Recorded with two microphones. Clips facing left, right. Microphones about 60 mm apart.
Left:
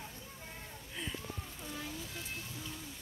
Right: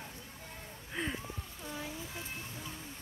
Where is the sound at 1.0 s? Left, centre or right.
Right.